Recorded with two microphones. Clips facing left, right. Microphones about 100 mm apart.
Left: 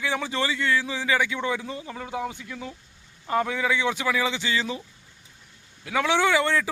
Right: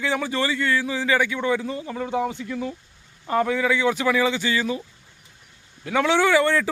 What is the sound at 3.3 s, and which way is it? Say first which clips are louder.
Speech: right 3 dB; 10° left (ahead or behind).